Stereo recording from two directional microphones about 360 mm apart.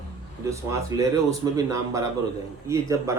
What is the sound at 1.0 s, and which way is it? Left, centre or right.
A man's voice, centre.